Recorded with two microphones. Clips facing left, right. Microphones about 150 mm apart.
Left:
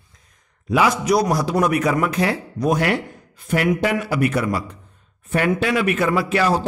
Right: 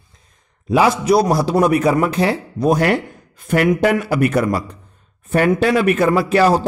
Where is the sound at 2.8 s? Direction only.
50° right (ahead or behind).